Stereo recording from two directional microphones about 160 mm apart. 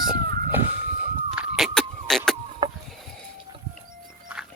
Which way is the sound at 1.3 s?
5° right (ahead or behind).